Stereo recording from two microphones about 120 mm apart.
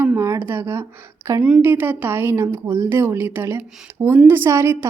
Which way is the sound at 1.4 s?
10° right (ahead or behind).